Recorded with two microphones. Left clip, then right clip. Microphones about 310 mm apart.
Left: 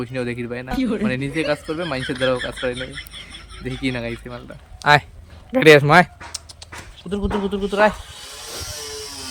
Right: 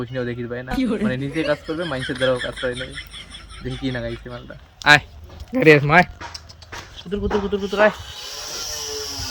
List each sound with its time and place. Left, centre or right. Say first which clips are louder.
0.0 s speech: left 1 dB; centre
4.8 s speech: right 1 dB; centre
7.1 s speech: right 1 dB; centre